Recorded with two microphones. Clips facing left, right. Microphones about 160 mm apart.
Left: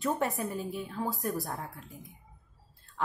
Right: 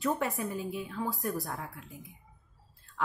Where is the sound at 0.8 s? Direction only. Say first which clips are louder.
Left 1 dB; 35° left (ahead or behind).